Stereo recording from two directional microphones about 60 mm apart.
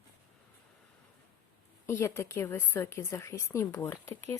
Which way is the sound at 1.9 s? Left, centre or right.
Left.